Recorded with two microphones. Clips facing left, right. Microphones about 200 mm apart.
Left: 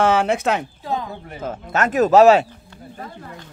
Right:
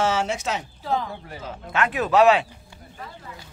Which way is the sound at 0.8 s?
20° left (ahead or behind).